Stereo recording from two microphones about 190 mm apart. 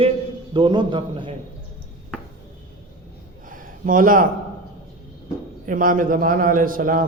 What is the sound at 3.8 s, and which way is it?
Speech, 45° right (ahead or behind).